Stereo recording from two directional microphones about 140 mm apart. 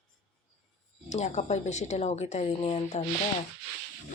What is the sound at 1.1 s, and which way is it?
A woman's voice, 55° left (ahead or behind).